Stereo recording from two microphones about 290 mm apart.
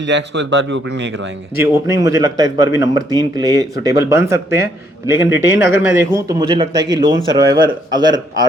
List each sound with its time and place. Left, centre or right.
0.0 s speech: right
1.6 s speech: centre
5.2 s speech: left
5.8 s speech: centre